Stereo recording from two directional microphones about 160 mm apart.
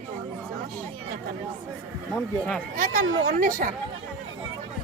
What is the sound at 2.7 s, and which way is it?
Speech, 55° right (ahead or behind).